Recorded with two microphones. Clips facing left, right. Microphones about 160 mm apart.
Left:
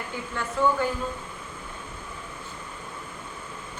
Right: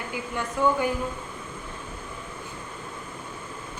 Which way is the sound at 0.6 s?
15° right (ahead or behind).